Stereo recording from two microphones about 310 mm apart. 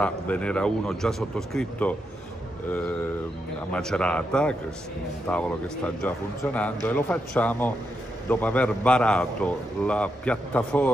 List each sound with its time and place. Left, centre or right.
0.0 s a man's voice: centre
3.7 s a man's voice: centre